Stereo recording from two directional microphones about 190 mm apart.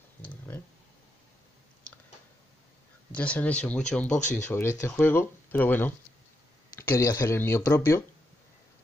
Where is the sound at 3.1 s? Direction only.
5° left (ahead or behind).